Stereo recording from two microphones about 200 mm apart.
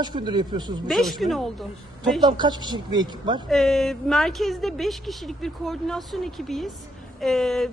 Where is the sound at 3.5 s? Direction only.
Centre (ahead or behind).